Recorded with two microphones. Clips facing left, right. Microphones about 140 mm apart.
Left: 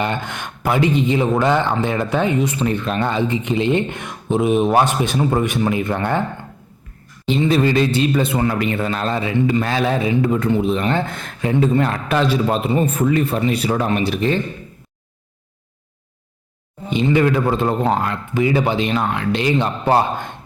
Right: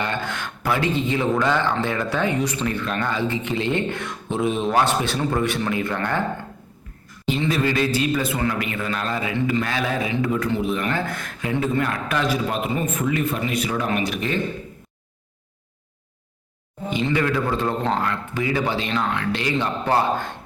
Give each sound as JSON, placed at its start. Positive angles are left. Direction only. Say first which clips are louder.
{"t": 0.0, "sound": "a man's voice", "louder": "left 3 dB", "side_deg": 20}
{"t": 7.3, "sound": "a man's voice", "louder": "left 6 dB", "side_deg": 25}
{"t": 16.9, "sound": "a man's voice", "louder": "left 6 dB", "side_deg": 20}